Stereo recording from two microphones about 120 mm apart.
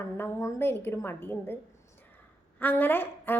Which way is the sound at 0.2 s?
25° left (ahead or behind).